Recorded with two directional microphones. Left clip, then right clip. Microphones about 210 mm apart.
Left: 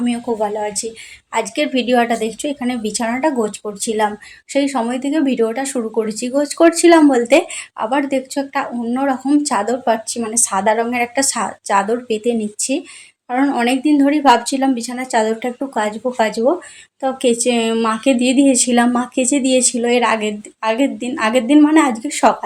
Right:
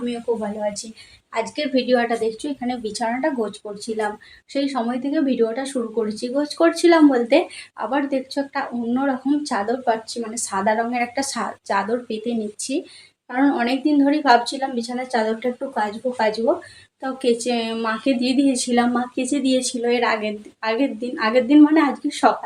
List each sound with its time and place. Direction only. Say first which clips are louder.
1.3 s speech: left 4 dB; 45° left (ahead or behind)
4.5 s speech: left 5 dB; 40° left (ahead or behind)
17.4 s speech: left 7 dB; 35° left (ahead or behind)